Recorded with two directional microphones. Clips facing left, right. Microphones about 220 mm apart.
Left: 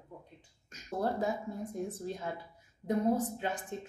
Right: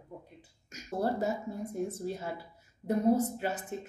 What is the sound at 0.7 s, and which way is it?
Speech, 5° right (ahead or behind).